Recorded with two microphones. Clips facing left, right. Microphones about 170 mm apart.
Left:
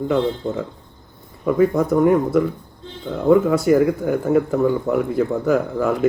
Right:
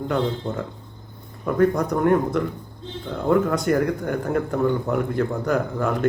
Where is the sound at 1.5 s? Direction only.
5° left (ahead or behind).